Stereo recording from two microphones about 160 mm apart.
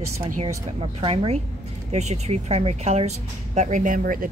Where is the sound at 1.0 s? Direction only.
35° right (ahead or behind).